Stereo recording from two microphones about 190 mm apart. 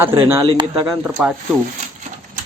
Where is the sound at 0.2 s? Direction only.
15° right (ahead or behind).